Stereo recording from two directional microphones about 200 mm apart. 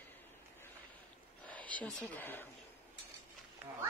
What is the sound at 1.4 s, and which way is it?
Speech, 5° left (ahead or behind).